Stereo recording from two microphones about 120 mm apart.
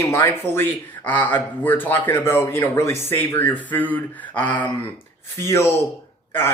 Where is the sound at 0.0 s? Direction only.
20° left (ahead or behind).